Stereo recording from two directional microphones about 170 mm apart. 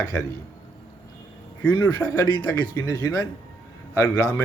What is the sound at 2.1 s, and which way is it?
A man's voice, 25° left (ahead or behind).